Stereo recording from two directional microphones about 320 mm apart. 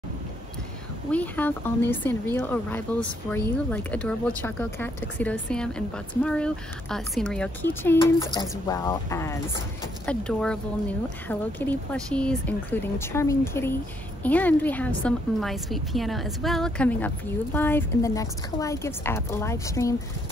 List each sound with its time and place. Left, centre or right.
1.1 s a woman's voice: centre